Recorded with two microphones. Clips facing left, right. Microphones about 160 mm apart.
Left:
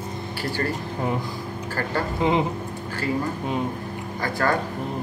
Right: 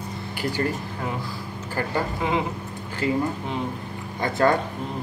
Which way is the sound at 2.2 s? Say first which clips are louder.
Left 6 dB; 20° left (ahead or behind).